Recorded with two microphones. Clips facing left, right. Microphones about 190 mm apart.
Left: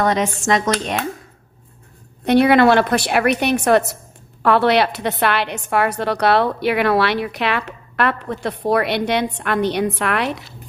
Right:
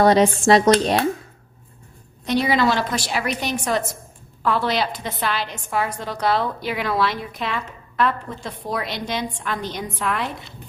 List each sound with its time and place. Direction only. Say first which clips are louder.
0.0 s speech: right 4 dB; 35° right (ahead or behind)
2.2 s a woman's voice: left 7 dB; 60° left (ahead or behind)